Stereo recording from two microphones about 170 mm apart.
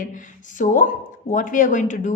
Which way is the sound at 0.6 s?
50° left (ahead or behind).